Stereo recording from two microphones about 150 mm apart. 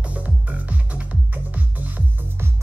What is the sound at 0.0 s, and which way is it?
Music, 10° right (ahead or behind).